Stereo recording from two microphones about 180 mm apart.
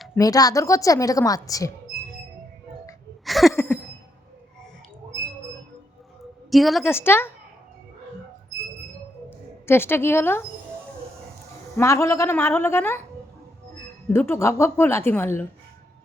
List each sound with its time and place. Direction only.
0.2 s a woman's voice: 20° left (ahead or behind)
3.2 s a sound: centre (ahead or behind)
6.5 s a woman's voice: centre (ahead or behind)
6.8 s a woman's voice: 15° left (ahead or behind)
9.6 s a woman's voice: 10° left (ahead or behind)
11.8 s a woman's voice: 15° left (ahead or behind)
14.1 s a woman's voice: 15° left (ahead or behind)